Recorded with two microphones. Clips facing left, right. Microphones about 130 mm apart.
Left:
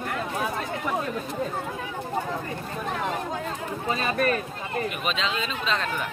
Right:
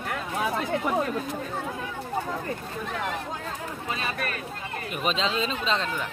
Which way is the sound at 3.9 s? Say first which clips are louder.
Left 8 dB; 40° left (ahead or behind).